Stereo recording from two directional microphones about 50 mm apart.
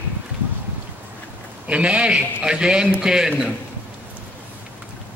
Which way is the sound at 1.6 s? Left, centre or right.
Right.